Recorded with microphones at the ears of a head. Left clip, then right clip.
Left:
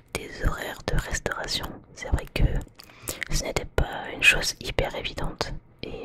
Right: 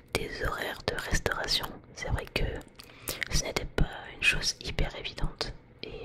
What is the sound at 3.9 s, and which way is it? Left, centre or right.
Speech, left.